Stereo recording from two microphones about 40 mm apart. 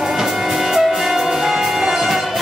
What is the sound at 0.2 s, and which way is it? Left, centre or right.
Music, centre.